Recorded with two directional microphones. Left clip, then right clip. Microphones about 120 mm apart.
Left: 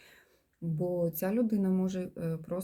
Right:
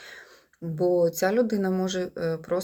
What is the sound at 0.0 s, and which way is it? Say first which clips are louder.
Speech: right 14 dB; 20° left (ahead or behind).